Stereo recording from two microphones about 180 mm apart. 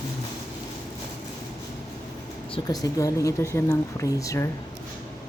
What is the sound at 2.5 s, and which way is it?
A woman's voice, 20° left (ahead or behind).